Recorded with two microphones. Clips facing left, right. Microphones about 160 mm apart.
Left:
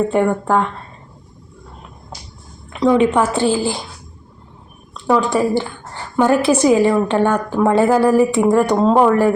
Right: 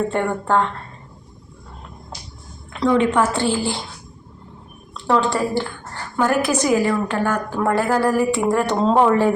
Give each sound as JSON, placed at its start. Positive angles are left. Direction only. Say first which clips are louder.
{"t": 0.1, "sound": "a woman's voice", "louder": "left 4 dB", "side_deg": 10}
{"t": 2.8, "sound": "a woman's voice", "louder": "left 3 dB", "side_deg": 15}
{"t": 5.0, "sound": "a woman's voice", "louder": "left 3 dB", "side_deg": 15}